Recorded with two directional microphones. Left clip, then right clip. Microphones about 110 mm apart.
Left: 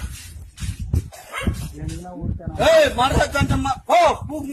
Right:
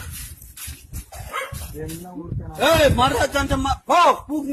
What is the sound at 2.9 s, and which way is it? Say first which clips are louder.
Speech: even; 20° left (ahead or behind).